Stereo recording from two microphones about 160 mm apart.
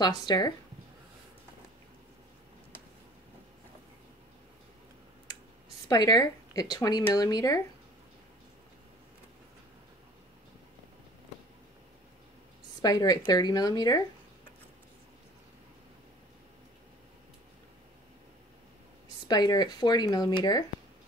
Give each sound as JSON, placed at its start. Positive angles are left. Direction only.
{"t": 0.0, "sound": "speech", "side_deg": 25}
{"t": 5.9, "sound": "speech", "side_deg": 25}
{"t": 12.8, "sound": "speech", "side_deg": 25}
{"t": 19.2, "sound": "speech", "side_deg": 25}